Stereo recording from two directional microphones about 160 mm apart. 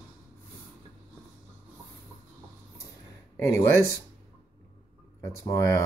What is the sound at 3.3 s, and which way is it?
Speech, 15° left (ahead or behind).